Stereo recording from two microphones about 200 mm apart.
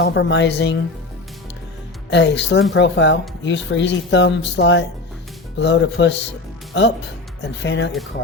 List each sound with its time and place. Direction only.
0.0 s speech: 60° left (ahead or behind)
2.0 s speech: 65° left (ahead or behind)
7.4 s speech: 65° left (ahead or behind)